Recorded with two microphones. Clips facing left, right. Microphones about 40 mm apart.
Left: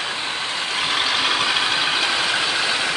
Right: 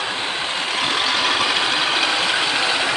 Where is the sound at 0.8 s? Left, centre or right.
Centre.